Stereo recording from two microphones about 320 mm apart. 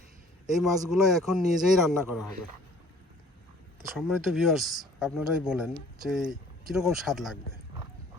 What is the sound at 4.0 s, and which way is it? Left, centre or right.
Speech, centre.